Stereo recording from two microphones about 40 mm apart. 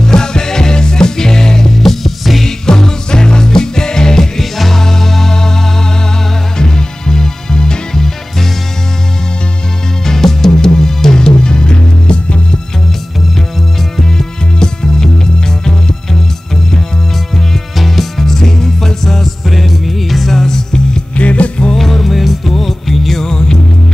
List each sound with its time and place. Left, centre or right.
0.0 s music: centre
2.4 s music: centre
4.4 s music: centre
6.6 s music: centre
10.0 s music: centre; by 12.4 s left
13.9 s music: centre
17.7 s music: centre
21.2 s music: left
21.7 s music: centre